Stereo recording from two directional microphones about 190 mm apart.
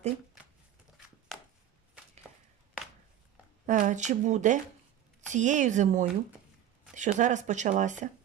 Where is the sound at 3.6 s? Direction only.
40° right (ahead or behind).